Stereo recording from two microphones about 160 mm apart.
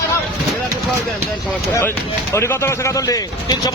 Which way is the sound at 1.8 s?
15° left (ahead or behind).